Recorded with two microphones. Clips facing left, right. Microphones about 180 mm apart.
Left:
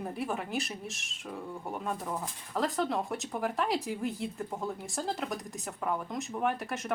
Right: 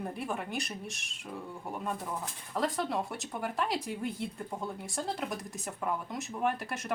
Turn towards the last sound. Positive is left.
turn(degrees=0)  # may be behind; listen again after turning